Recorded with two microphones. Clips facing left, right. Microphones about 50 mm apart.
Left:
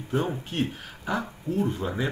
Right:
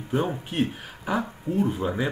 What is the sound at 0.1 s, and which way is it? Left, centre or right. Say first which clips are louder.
Speech: right 2 dB; centre.